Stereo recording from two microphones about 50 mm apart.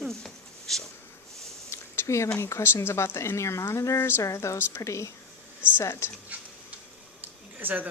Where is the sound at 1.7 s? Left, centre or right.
Left.